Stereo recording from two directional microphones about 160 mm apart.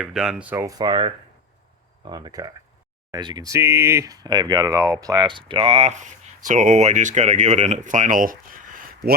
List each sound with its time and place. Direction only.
0.0 s speech: 5° right (ahead or behind); by 9.0 s 60° right (ahead or behind)